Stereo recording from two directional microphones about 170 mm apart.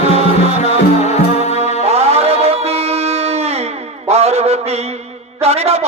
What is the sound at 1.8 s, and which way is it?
Music, 40° right (ahead or behind).